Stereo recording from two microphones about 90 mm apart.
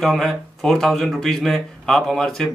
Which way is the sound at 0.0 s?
5° left (ahead or behind).